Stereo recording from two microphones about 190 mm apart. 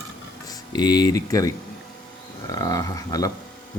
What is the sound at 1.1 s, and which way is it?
Speech, 15° left (ahead or behind).